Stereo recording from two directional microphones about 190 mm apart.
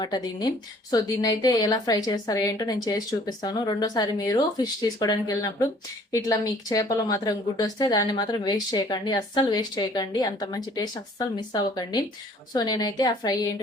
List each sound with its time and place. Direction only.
0.0 s speech: 20° left (ahead or behind)